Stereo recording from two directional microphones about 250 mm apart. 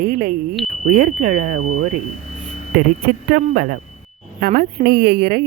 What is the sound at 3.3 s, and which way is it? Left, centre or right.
A woman's voice, right.